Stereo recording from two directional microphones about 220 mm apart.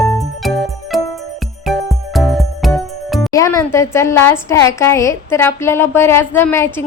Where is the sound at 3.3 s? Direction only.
15° left (ahead or behind).